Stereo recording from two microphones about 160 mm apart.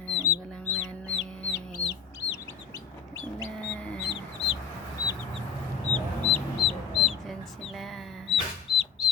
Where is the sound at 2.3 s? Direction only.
20° left (ahead or behind).